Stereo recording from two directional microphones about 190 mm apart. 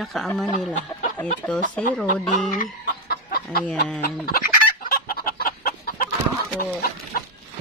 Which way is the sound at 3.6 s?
5° left (ahead or behind).